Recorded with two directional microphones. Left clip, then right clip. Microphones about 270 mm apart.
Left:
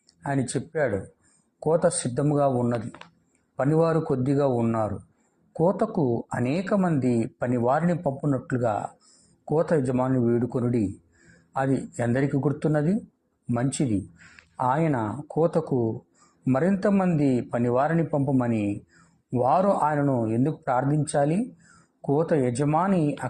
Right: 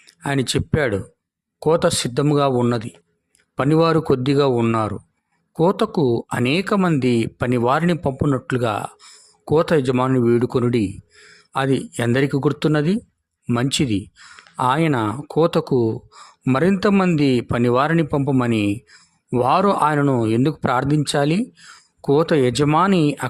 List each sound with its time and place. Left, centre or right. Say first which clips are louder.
0.2 s a man's voice: right 7 dB; right